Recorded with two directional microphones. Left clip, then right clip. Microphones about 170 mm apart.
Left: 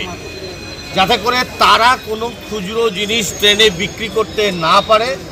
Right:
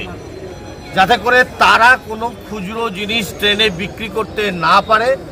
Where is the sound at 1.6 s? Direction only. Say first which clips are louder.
Left 2 dB; 25° right (ahead or behind).